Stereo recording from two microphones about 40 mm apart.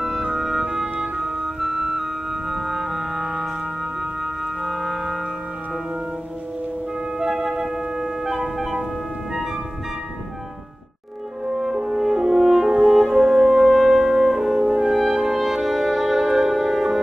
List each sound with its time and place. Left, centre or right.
0.0 s music: centre
7.2 s music: centre
11.4 s french horn: centre
12.9 s brass instrument: centre
14.6 s music: right
15.0 s music: centre